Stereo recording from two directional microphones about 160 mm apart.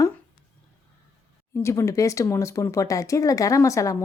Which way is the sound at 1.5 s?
15° left (ahead or behind).